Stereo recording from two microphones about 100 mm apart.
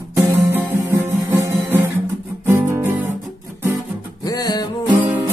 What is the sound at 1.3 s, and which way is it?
Music, 20° right (ahead or behind).